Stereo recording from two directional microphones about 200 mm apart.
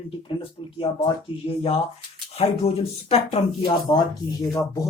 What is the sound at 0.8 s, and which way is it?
Speech, 30° left (ahead or behind).